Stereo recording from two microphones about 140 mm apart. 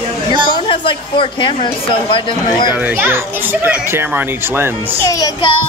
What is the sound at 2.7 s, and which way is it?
A child's voice, 15° right (ahead or behind).